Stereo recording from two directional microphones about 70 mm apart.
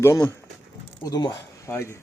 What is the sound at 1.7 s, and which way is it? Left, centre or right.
Speech, left.